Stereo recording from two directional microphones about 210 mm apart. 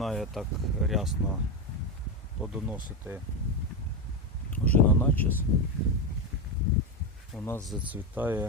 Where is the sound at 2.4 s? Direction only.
5° right (ahead or behind).